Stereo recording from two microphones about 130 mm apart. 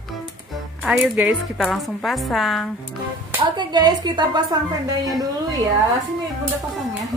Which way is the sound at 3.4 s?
35° right (ahead or behind).